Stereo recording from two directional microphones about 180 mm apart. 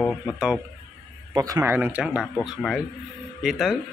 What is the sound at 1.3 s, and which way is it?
A man's voice, 20° right (ahead or behind).